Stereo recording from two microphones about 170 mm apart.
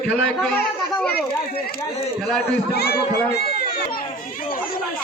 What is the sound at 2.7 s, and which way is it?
Speech, 70° left (ahead or behind).